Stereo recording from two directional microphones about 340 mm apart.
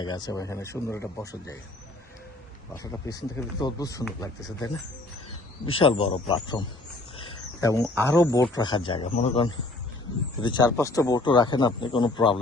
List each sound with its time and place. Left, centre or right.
0.0 s a man's voice: centre
2.7 s a man's voice: centre
7.6 s a man's voice: centre